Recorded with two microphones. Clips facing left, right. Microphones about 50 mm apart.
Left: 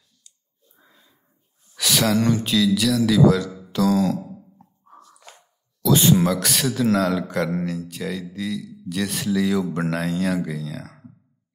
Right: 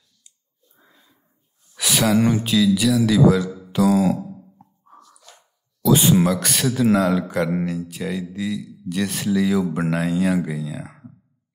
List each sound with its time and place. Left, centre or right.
1.8 s speech: centre
4.9 s a sound: left
5.8 s speech: centre